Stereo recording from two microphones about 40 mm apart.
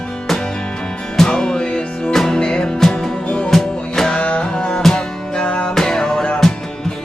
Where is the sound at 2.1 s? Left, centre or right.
Centre.